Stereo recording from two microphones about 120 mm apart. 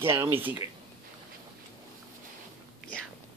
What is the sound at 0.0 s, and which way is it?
Speech, 20° right (ahead or behind).